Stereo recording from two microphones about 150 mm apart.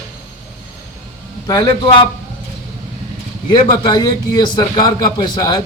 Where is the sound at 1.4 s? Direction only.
30° left (ahead or behind).